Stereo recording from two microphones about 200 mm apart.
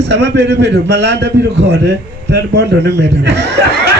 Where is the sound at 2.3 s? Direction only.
55° right (ahead or behind).